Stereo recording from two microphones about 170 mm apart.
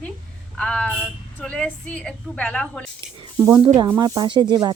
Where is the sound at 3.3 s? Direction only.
15° right (ahead or behind).